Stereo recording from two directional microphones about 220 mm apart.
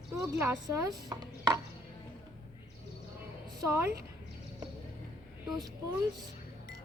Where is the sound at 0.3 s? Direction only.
10° right (ahead or behind).